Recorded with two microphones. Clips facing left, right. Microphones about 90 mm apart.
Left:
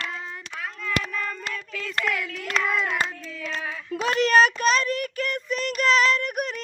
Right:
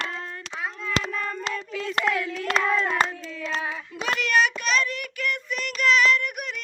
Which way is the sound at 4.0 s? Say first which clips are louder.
Left 4 dB; 35° left (ahead or behind).